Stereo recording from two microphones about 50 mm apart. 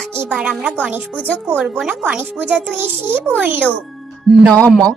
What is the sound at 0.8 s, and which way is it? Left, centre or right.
Speech, right.